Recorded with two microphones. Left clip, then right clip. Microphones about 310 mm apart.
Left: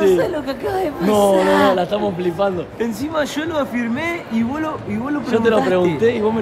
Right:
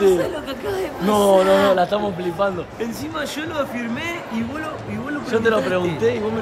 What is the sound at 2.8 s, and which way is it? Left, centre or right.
Speech, centre.